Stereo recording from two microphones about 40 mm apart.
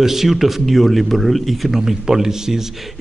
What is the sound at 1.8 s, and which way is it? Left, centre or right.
Speech, centre.